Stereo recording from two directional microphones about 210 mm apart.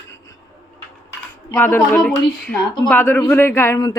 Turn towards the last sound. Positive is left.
turn(degrees=15)  # may be behind; listen again after turning